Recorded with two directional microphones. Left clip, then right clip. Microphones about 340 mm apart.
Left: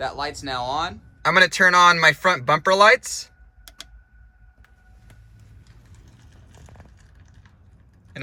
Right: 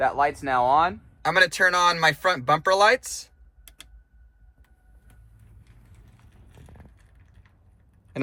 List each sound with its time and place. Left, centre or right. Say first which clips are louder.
0.0 s speech: right 5 dB; centre
1.2 s speech: left 4 dB; centre
6.6 s a sound: left 3 dB; centre